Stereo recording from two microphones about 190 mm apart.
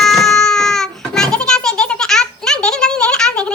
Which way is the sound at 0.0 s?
Centre (ahead or behind).